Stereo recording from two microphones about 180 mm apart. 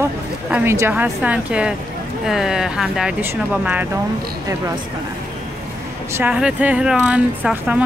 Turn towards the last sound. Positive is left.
turn(degrees=-5)  # may be behind; listen again after turning